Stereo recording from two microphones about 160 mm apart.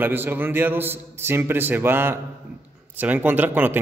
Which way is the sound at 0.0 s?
10° right (ahead or behind).